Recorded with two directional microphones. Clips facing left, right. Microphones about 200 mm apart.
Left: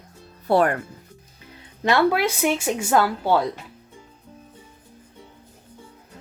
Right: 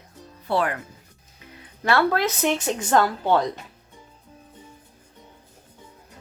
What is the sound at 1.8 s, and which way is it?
Speech, 15° left (ahead or behind).